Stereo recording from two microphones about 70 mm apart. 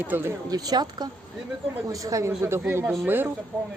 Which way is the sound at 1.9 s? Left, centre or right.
Right.